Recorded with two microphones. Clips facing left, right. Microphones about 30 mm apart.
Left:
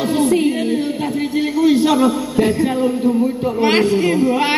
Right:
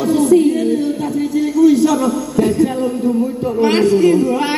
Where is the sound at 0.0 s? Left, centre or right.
Left.